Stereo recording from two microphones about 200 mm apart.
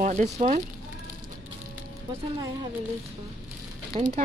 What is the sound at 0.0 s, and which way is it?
Speech, 35° right (ahead or behind).